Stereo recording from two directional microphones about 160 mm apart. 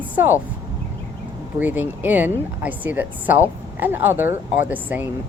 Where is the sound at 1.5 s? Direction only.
10° right (ahead or behind).